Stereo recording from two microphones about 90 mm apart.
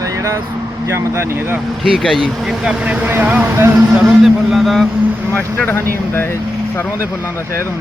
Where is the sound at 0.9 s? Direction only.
30° right (ahead or behind).